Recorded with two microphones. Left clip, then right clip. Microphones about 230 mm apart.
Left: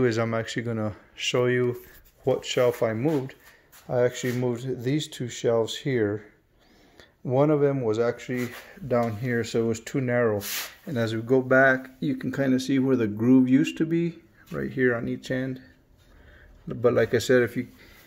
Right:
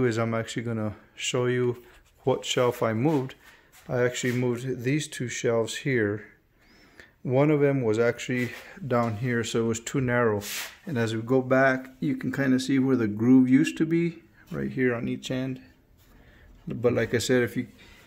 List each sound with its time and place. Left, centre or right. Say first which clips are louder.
0.0 s speech: left 2 dB; centre
16.6 s speech: left 3 dB; centre